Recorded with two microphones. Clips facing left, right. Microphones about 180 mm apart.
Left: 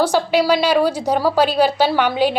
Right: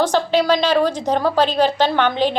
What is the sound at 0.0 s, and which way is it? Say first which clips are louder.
A woman's voice: left 1 dB; 10° left (ahead or behind).